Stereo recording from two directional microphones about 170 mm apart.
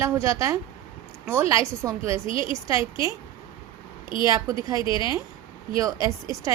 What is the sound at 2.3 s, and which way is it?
Speech, 30° left (ahead or behind).